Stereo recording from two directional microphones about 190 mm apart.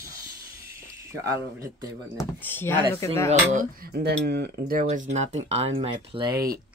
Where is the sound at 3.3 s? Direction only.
45° right (ahead or behind); by 6.5 s 25° right (ahead or behind).